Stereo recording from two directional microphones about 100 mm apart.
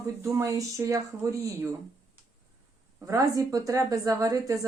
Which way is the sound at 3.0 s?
35° right (ahead or behind).